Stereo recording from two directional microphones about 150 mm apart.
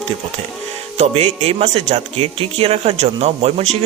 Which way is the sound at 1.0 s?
45° right (ahead or behind).